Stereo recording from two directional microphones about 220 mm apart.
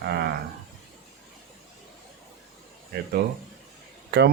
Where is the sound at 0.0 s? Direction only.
45° right (ahead or behind).